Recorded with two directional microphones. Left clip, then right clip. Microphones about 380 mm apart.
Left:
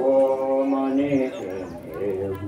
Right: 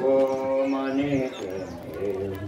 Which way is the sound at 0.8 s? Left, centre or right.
Left.